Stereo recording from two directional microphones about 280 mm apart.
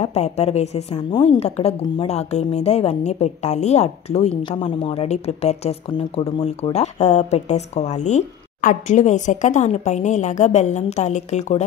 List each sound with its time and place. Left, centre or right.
0.0 s a woman's voice: left